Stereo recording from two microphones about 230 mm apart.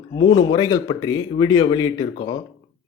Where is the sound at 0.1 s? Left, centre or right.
Centre.